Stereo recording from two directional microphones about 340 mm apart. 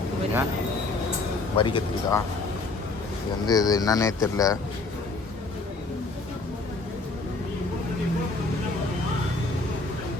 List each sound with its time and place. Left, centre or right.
1.5 s speech: centre
3.4 s speech: centre